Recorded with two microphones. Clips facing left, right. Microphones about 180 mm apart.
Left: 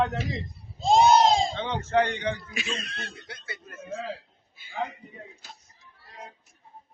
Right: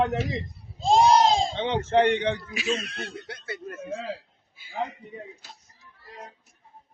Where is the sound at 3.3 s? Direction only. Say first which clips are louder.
Right 7 dB; 55° right (ahead or behind).